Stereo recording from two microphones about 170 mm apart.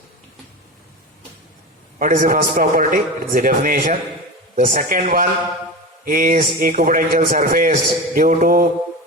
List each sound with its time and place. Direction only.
2.0 s a man's voice: 50° right (ahead or behind)